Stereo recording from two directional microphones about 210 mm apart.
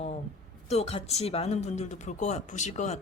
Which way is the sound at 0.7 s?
30° left (ahead or behind).